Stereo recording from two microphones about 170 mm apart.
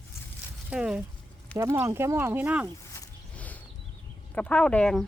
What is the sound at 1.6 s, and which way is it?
Speech, 15° right (ahead or behind).